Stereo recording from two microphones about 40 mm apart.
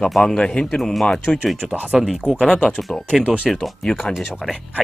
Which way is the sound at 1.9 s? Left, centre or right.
Centre.